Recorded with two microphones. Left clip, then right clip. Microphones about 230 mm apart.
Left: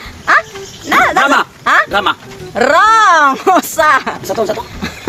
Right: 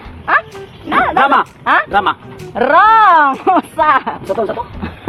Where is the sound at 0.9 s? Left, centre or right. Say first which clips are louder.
Left 3 dB; left.